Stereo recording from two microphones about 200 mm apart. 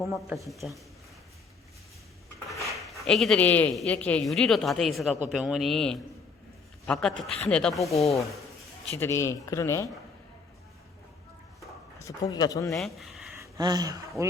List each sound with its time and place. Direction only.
0.0 s speech: centre (ahead or behind)
3.0 s a man's voice: centre (ahead or behind)
7.9 s speech: 30° left (ahead or behind)
9.0 s speech: 15° left (ahead or behind)
12.0 s speech: 15° left (ahead or behind)
12.7 s speech: centre (ahead or behind)
13.4 s speech: 20° right (ahead or behind)